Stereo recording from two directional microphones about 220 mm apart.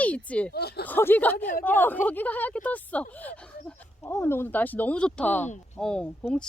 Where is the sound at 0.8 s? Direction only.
10° left (ahead or behind).